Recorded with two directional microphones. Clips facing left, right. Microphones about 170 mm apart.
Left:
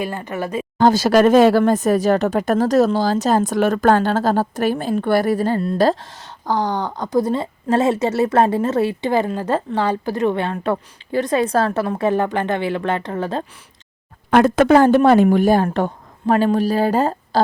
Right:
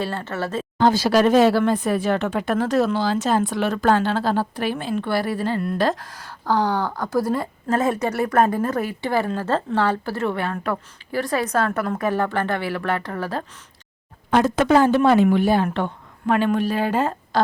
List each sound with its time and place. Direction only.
0.0 s speech: 15° left (ahead or behind)
0.8 s a woman's voice: 45° left (ahead or behind); by 6.3 s 25° left (ahead or behind)
6.4 s a woman's voice: 15° left (ahead or behind)
14.3 s speech: 65° left (ahead or behind); by 17.4 s 35° left (ahead or behind)